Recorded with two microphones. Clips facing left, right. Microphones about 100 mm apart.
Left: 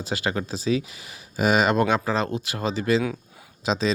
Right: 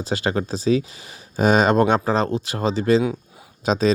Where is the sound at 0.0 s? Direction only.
35° right (ahead or behind).